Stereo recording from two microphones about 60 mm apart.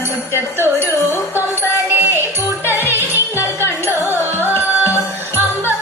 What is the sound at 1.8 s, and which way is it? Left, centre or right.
Music, right.